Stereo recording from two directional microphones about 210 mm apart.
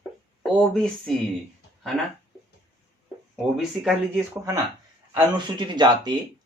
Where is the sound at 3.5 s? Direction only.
Centre (ahead or behind).